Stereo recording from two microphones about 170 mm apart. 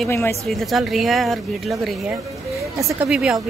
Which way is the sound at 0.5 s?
Centre (ahead or behind).